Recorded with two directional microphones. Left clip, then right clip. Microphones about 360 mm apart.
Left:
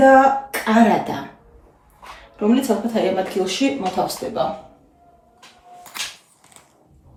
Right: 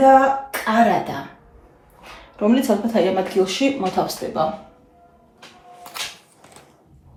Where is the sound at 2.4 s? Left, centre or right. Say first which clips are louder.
Right 1 dB; centre.